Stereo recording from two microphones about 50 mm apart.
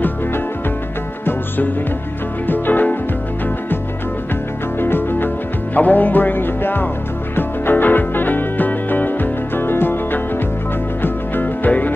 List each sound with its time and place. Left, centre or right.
2.4 s music: left
4.7 s music: left
5.8 s music: left